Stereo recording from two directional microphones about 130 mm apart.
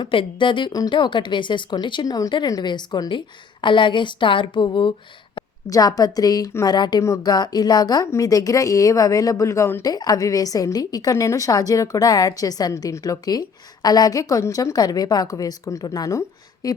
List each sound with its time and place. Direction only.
0.0 s a woman's voice: 40° left (ahead or behind)
5.6 s a woman's voice: 30° left (ahead or behind)